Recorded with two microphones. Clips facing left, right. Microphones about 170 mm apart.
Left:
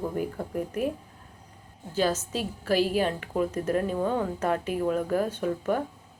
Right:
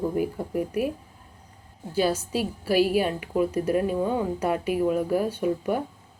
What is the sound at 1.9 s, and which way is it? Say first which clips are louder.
Speech: right 2 dB; 10° right (ahead or behind).